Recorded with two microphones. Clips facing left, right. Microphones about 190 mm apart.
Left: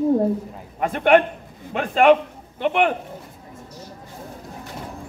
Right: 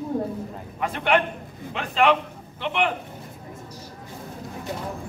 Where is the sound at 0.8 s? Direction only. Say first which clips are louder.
Left 6 dB; 50° left (ahead or behind).